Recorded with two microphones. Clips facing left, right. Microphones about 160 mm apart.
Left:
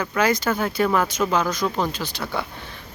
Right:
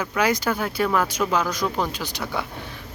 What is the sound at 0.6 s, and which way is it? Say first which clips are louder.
Speech: left 2 dB; centre (ahead or behind).